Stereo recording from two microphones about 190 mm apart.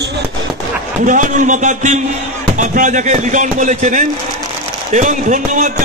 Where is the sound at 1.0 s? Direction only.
45° right (ahead or behind).